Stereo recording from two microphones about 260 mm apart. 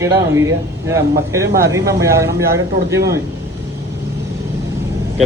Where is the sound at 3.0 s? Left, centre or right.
Right.